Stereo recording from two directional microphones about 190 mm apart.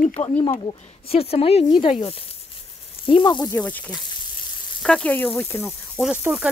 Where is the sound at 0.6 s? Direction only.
30° left (ahead or behind).